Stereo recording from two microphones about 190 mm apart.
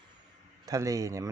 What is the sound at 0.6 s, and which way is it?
Speech, 20° right (ahead or behind).